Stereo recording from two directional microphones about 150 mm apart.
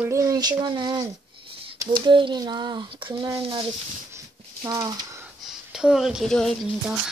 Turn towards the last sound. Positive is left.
turn(degrees=5)  # may be behind; listen again after turning